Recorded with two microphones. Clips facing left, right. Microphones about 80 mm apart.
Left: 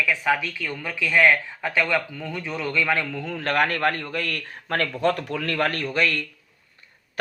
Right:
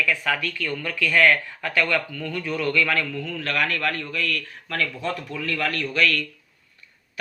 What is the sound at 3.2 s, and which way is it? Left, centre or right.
A man's voice, left.